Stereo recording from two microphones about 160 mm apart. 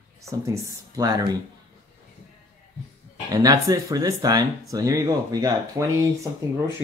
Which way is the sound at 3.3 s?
25° right (ahead or behind).